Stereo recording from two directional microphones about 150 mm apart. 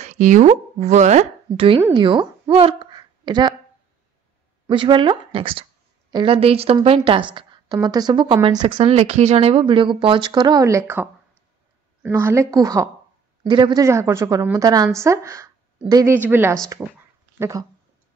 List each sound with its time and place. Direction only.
0.0 s a sound: 55° right (ahead or behind)
0.5 s speech: 45° right (ahead or behind)
1.5 s a woman's voice: 35° right (ahead or behind)
4.6 s a woman's voice: 35° right (ahead or behind)
13.8 s a woman's voice: 20° right (ahead or behind)
17.4 s speech: 20° right (ahead or behind)